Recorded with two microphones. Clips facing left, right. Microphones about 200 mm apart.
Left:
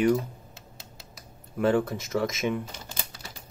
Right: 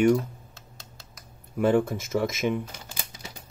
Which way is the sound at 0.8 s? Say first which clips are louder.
Left 2 dB; centre (ahead or behind).